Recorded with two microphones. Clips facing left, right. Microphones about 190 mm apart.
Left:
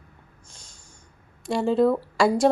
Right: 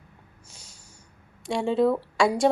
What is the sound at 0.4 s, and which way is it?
Snort, 10° right (ahead or behind).